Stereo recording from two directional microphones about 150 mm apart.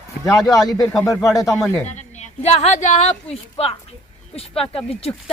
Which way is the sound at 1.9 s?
50° left (ahead or behind).